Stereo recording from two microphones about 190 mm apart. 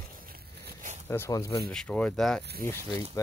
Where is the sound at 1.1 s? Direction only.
15° left (ahead or behind).